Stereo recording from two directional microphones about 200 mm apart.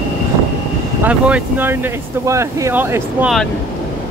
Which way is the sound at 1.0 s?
10° right (ahead or behind).